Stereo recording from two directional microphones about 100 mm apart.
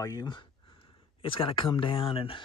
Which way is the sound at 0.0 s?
40° left (ahead or behind).